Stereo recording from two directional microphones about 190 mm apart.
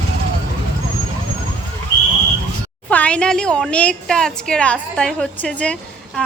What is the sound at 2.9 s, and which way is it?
A woman's voice, 5° left (ahead or behind).